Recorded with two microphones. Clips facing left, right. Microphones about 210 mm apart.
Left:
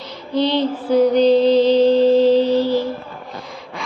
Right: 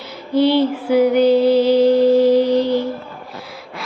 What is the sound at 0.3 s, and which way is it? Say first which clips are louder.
Music: right 4 dB; 10° right (ahead or behind).